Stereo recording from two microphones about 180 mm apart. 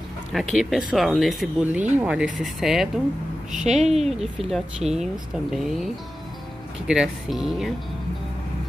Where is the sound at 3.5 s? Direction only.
40° right (ahead or behind).